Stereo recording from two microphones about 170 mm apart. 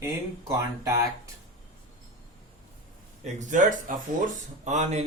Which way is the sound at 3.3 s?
45° right (ahead or behind).